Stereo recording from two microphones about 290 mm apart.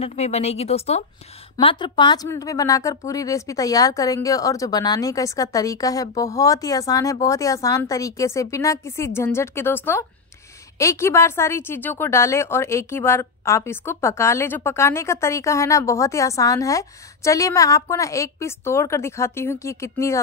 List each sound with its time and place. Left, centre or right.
0.0 s a woman's voice: left